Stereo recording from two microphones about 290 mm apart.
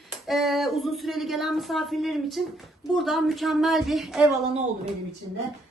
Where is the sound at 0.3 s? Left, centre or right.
Centre.